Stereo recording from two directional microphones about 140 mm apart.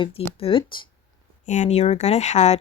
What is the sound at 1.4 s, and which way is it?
Speech, 60° left (ahead or behind).